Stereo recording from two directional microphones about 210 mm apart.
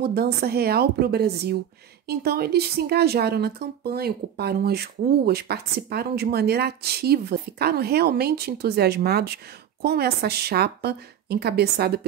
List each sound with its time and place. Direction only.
0.0 s speech: 45° right (ahead or behind)